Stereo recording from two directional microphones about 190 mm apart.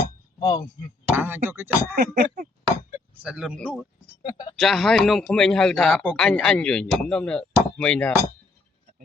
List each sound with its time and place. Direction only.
0.3 s speech: 20° left (ahead or behind)
1.1 s speech: 10° right (ahead or behind)
2.0 s a sound: 55° right (ahead or behind)
3.2 s speech: 5° right (ahead or behind)
4.2 s speech: 25° left (ahead or behind)
4.5 s speech: centre (ahead or behind)